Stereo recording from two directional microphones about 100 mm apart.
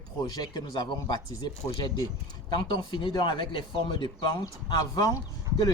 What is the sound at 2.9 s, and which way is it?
Speech, 50° left (ahead or behind).